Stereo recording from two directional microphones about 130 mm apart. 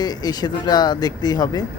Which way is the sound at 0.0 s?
30° left (ahead or behind).